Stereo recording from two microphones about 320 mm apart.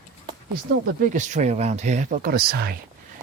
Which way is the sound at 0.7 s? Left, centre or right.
Right.